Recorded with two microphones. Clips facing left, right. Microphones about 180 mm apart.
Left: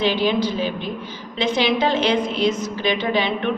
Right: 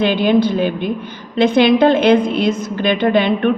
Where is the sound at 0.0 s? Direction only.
55° right (ahead or behind).